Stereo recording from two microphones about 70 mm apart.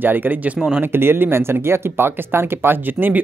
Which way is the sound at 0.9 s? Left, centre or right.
Right.